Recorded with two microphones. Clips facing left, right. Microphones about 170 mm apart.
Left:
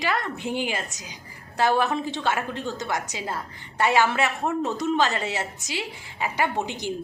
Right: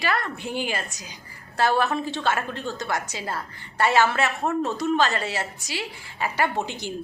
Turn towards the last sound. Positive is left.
turn(degrees=15)  # may be behind; listen again after turning